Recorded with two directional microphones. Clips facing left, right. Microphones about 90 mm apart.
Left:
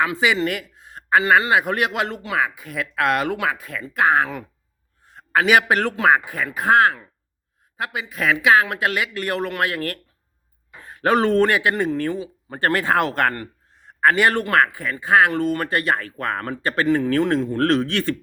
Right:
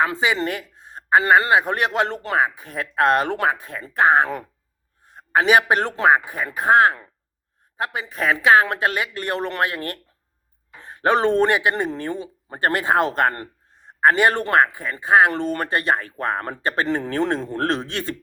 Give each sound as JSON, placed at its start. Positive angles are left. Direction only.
{"t": 0.0, "sound": "speech", "side_deg": -30}
{"t": 7.8, "sound": "a man's voice", "side_deg": -35}
{"t": 15.3, "sound": "speech", "side_deg": -35}